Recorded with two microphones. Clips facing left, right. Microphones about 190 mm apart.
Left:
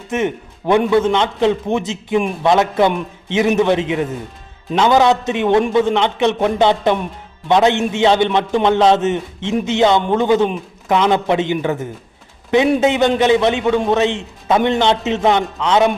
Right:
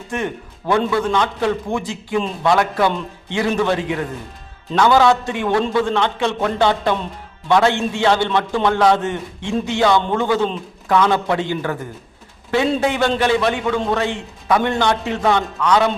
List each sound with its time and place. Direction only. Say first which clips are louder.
0.1 s a man's voice: left 5 dB; 20° left (ahead or behind)